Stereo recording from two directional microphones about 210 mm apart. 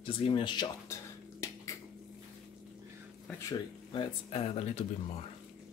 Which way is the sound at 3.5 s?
25° left (ahead or behind).